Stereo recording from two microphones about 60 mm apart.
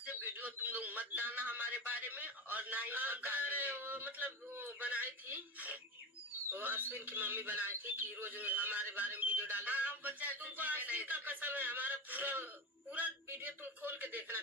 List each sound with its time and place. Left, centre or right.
0.2 s a man's voice: right